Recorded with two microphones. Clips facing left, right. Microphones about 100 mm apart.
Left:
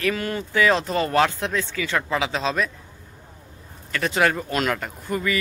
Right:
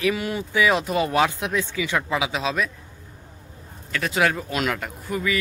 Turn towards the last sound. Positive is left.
turn(degrees=0)  # may be behind; listen again after turning